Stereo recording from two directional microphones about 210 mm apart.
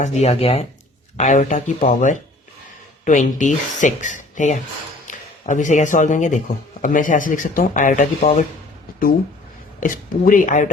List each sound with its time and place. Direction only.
0.0 s speech: 30° left (ahead or behind)
9.8 s speech: 40° left (ahead or behind)